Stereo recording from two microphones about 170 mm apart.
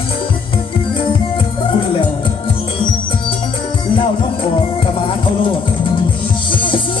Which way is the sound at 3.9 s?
30° left (ahead or behind).